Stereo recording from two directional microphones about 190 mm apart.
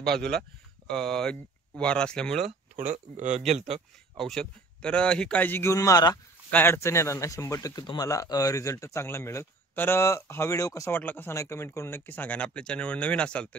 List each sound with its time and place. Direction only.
0.0 s speech: 5° left (ahead or behind)
2.7 s speech: 40° right (ahead or behind)
4.2 s a man's voice: 5° left (ahead or behind)